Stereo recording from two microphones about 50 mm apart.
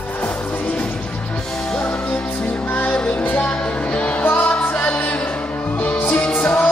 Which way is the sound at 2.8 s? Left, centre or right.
Left.